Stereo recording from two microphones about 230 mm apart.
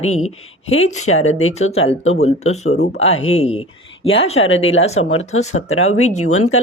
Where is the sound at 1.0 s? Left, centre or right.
Left.